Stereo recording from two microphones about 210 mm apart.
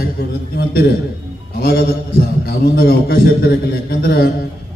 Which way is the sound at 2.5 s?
45° left (ahead or behind).